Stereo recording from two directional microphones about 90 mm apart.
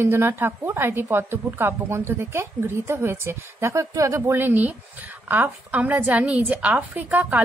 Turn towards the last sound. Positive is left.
turn(degrees=-20)  # may be behind; listen again after turning